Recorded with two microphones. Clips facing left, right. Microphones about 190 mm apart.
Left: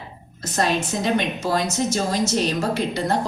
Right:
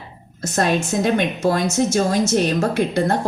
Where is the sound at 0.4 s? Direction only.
50° right (ahead or behind).